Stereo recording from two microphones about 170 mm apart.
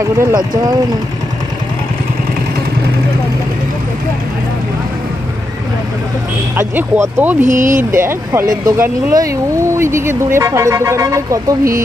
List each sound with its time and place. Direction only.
0.2 s speech: 25° right (ahead or behind)
6.7 s speech: 10° right (ahead or behind)
7.4 s speech: 50° right (ahead or behind)
7.9 s speech: 15° right (ahead or behind)